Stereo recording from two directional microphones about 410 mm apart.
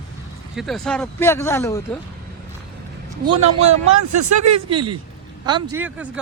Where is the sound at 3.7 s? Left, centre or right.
Right.